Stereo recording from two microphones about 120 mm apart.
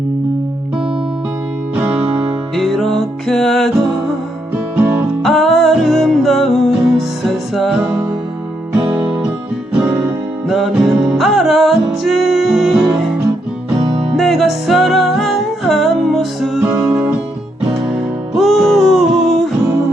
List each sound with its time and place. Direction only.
1.7 s music: 15° right (ahead or behind)
2.6 s music: centre (ahead or behind)
4.5 s music: 15° right (ahead or behind)
5.2 s music: centre (ahead or behind)
8.9 s music: 15° right (ahead or behind)
13.8 s music: 50° right (ahead or behind)
14.2 s music: centre (ahead or behind)
16.6 s music: 10° right (ahead or behind)